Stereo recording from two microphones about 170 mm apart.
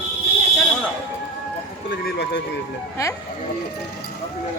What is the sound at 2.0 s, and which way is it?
Speech, 85° left.